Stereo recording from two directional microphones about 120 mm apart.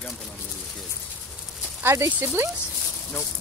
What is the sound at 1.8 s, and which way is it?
Speech, 20° right (ahead or behind).